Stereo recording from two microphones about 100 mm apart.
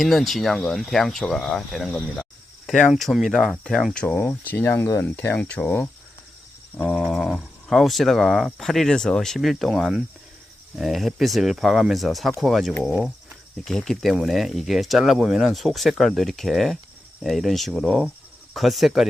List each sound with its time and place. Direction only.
0.0 s speech: centre (ahead or behind)
4.2 s speech: 15° left (ahead or behind)
6.7 s speech: centre (ahead or behind)